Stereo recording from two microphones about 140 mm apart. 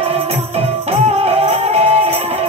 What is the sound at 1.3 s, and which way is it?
Music, 45° right (ahead or behind).